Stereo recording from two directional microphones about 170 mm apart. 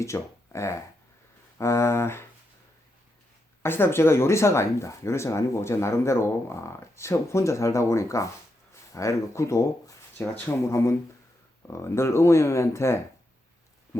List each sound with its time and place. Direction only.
0.0 s speech: 15° left (ahead or behind)
3.6 s speech: 15° left (ahead or behind)